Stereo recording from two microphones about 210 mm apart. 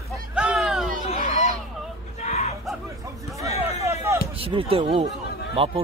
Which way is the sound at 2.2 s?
30° left (ahead or behind).